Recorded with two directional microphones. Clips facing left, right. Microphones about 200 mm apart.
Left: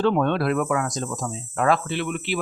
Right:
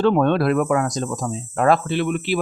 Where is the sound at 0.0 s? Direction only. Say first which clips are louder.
Right 4 dB; 45° right (ahead or behind).